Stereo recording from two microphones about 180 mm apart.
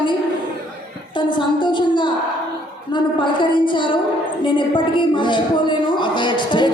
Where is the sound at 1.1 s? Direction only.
25° left (ahead or behind).